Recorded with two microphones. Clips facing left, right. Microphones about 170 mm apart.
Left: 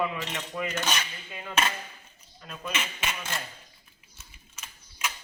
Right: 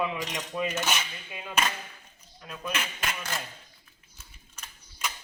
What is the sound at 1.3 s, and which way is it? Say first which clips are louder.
Speech: even; 15° right (ahead or behind).